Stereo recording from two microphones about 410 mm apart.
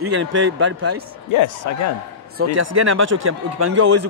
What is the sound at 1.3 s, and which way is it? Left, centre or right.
Speech, left.